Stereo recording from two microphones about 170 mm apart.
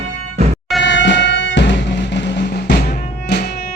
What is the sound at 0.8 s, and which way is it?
Music, 90° left.